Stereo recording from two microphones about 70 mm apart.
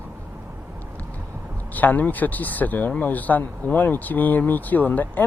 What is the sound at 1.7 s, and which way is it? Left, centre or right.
Speech, left.